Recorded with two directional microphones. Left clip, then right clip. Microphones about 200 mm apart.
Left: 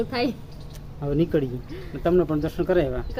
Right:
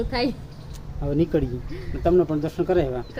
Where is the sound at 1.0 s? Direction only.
5° right (ahead or behind).